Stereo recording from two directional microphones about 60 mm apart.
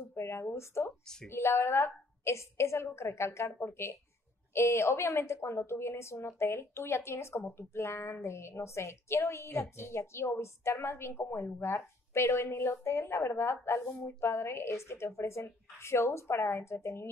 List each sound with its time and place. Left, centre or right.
0.2 s a woman's voice: left